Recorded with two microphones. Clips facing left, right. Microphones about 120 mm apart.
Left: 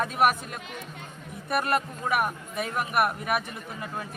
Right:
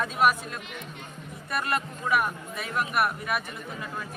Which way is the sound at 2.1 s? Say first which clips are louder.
Right 1 dB; 50° left (ahead or behind).